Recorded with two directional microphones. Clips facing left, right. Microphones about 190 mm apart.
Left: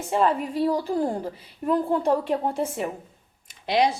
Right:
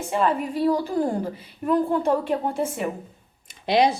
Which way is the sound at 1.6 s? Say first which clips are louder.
Right 1 dB; 30° left (ahead or behind).